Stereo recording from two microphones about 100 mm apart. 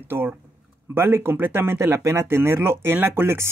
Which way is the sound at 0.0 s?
20° right (ahead or behind).